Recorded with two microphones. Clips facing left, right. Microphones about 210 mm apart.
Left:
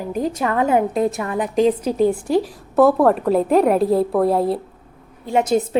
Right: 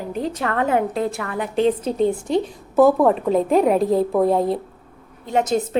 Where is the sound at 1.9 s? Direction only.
5° left (ahead or behind).